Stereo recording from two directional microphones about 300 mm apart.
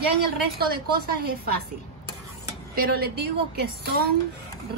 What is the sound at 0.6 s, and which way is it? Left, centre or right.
Speech, right.